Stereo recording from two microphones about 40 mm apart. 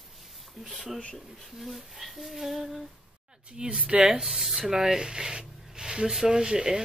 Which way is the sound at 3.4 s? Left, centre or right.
Right.